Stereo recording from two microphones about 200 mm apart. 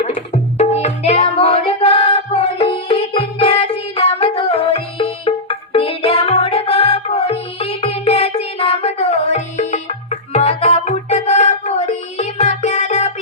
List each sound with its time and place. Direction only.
0.1 s music: 30° left (ahead or behind)